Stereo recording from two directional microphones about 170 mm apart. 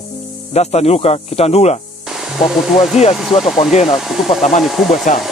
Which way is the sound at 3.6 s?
40° left (ahead or behind).